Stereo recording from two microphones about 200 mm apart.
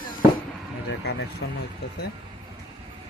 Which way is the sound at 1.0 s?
55° left (ahead or behind).